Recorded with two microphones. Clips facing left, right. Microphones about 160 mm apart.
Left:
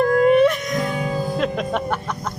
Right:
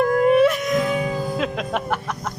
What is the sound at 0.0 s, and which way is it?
Music, 5° right (ahead or behind).